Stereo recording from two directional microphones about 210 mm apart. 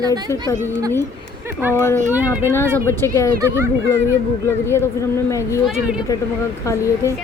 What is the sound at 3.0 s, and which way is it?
Speech, 15° left (ahead or behind).